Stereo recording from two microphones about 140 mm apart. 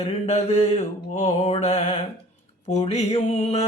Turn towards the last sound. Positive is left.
turn(degrees=50)  # may be behind; listen again after turning